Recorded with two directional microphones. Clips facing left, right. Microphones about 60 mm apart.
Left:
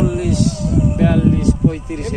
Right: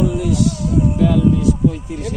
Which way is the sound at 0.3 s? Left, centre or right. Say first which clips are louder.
Even; left.